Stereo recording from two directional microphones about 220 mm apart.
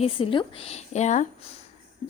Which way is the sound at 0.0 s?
25° left (ahead or behind).